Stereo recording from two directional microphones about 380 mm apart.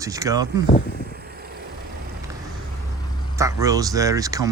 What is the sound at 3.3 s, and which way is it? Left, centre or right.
Speech, centre.